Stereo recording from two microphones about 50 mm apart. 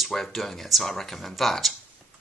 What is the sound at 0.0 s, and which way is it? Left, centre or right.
Speech, centre.